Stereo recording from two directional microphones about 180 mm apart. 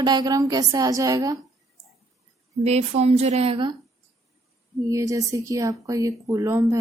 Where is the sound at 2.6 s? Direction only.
35° right (ahead or behind).